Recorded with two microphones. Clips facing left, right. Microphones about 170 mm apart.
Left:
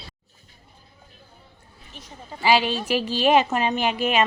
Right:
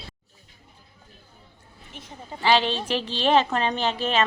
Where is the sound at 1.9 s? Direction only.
20° right (ahead or behind).